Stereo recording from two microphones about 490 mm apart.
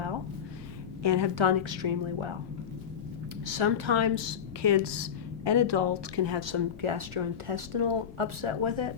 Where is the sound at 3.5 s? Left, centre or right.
Right.